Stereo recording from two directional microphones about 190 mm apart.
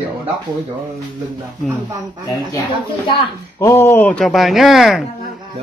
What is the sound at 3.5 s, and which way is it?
Speech, 15° left (ahead or behind).